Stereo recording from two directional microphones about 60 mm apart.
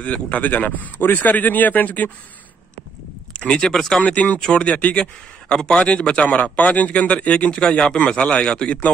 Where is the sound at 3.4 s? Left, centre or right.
Centre.